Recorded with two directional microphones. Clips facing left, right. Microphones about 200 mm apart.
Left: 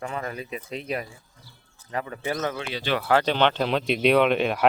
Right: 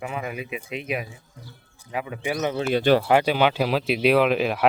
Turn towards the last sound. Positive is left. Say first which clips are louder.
# even
turn(degrees=0)  # may be behind; listen again after turning